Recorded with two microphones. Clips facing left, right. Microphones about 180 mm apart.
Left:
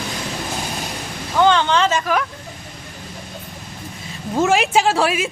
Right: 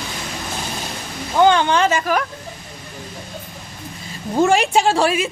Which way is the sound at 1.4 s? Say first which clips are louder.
Right 1 dB; 15° right (ahead or behind).